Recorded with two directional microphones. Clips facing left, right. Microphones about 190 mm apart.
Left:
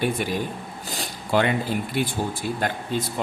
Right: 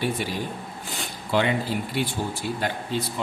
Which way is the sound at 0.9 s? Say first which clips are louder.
Left 2 dB; 45° left (ahead or behind).